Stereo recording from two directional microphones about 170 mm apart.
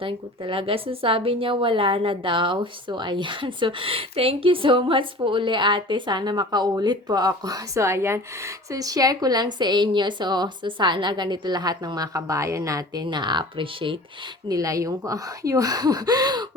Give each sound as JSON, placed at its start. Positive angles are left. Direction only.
{"t": 0.0, "sound": "a woman's voice", "side_deg": -30}